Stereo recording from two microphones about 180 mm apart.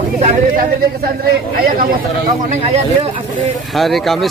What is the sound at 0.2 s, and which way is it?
Speech, 50° right (ahead or behind).